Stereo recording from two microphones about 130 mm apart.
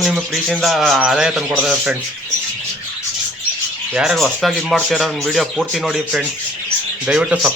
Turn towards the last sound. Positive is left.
turn(degrees=-10)  # may be behind; listen again after turning